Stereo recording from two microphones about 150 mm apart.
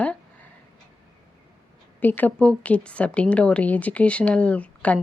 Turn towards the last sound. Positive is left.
turn(degrees=10)  # may be behind; listen again after turning